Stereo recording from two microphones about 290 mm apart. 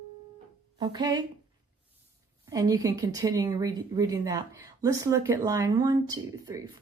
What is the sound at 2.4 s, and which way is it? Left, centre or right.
A woman's voice, centre.